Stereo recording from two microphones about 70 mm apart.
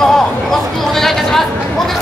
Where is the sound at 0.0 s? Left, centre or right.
Centre.